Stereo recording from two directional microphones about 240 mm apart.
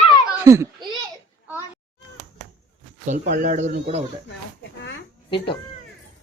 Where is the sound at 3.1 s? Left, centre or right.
Right.